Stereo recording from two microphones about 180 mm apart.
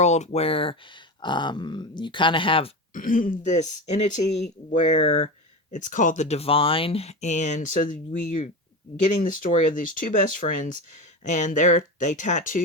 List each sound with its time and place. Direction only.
0.0 s speech: 40° left (ahead or behind)
2.9 s speech: 50° left (ahead or behind)